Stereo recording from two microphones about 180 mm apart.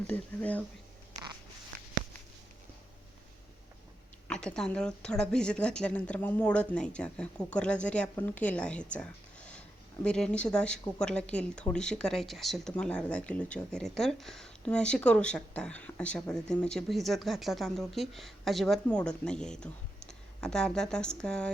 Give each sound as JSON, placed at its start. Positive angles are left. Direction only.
{"t": 0.1, "sound": "speech", "side_deg": 10}
{"t": 1.1, "sound": "biting", "side_deg": -20}
{"t": 4.3, "sound": "speech", "side_deg": 5}